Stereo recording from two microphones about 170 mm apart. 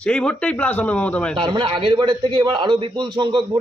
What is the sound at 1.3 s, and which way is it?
A man's voice, 30° right (ahead or behind).